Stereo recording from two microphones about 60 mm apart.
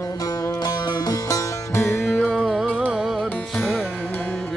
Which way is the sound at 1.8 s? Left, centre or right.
Left.